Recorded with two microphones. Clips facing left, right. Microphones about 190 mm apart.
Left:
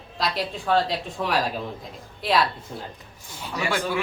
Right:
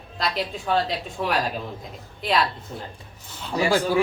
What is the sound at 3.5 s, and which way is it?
Speech, 35° right (ahead or behind).